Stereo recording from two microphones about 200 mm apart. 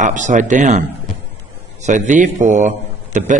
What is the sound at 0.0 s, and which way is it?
Speech, 40° right (ahead or behind).